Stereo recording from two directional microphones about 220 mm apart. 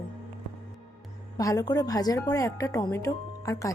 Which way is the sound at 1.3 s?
15° left (ahead or behind).